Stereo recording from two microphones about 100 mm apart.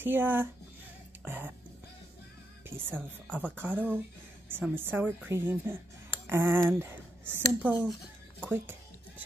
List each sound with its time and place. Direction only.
0.0 s a woman's voice: 20° right (ahead or behind)
2.7 s a woman's voice: 20° right (ahead or behind)
6.2 s a sound: 25° right (ahead or behind)
6.8 s a woman's voice: 20° right (ahead or behind)